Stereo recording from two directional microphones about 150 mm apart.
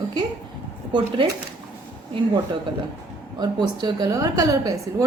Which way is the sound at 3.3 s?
30° right (ahead or behind).